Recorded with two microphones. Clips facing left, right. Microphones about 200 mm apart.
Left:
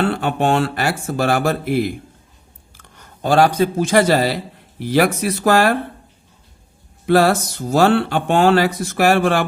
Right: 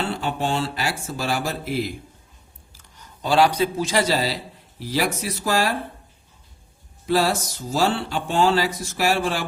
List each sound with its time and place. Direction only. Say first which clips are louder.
0.0 s speech: left 7 dB; 60° left (ahead or behind)
7.0 s speech: left 7 dB; 60° left (ahead or behind)